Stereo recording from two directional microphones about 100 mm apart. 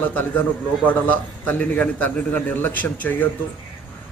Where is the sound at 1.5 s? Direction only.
15° left (ahead or behind).